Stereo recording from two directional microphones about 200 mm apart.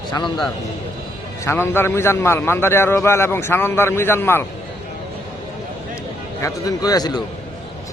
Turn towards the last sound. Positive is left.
turn(degrees=20)  # may be behind; listen again after turning